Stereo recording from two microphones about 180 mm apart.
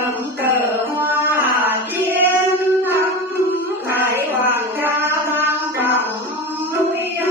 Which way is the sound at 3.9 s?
10° right (ahead or behind).